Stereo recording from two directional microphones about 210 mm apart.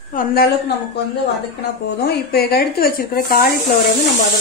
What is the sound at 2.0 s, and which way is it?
A woman's voice, 50° left (ahead or behind).